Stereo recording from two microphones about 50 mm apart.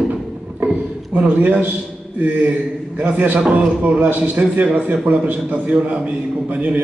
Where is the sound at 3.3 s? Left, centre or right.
Right.